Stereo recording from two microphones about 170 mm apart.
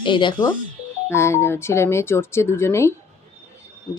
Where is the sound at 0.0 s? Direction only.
30° left (ahead or behind).